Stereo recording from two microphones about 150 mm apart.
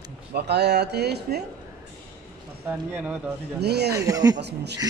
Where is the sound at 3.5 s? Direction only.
90° right.